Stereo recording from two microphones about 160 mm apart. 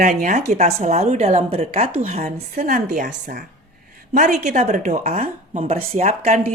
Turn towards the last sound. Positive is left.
turn(degrees=-45)  # may be behind; listen again after turning